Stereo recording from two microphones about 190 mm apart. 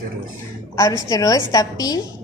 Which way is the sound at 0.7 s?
15° left (ahead or behind).